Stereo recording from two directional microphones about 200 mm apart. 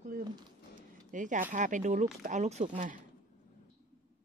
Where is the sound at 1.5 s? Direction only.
40° right (ahead or behind).